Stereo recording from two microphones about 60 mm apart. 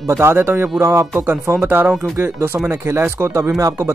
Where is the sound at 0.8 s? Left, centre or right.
Right.